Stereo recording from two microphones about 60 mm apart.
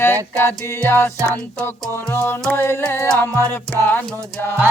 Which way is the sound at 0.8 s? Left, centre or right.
Left.